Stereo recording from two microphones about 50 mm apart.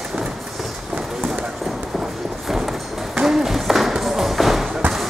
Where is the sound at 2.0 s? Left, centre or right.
Centre.